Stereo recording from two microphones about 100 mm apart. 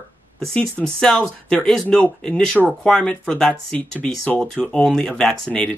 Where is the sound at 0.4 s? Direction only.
5° left (ahead or behind).